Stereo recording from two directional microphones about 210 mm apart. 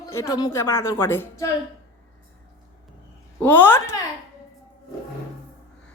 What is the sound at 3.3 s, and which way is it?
Speech, 10° left (ahead or behind).